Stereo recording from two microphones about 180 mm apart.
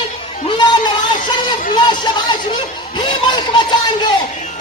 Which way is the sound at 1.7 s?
25° left (ahead or behind).